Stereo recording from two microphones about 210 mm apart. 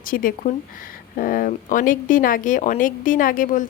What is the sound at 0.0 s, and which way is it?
Speech, 40° left (ahead or behind).